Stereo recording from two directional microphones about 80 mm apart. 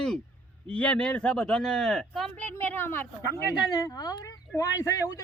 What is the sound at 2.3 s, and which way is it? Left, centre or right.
A man's voice, left.